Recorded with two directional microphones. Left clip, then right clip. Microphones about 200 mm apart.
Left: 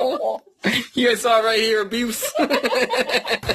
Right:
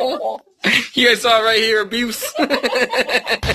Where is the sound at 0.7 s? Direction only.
10° left (ahead or behind).